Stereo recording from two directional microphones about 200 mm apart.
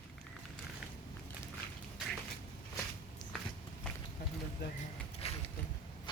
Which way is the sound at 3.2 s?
20° left (ahead or behind).